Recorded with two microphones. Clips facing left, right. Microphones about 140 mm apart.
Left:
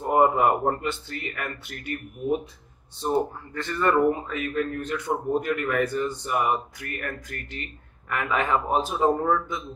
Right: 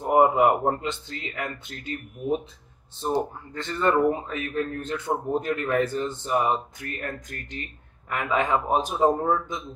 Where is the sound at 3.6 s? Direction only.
25° right (ahead or behind).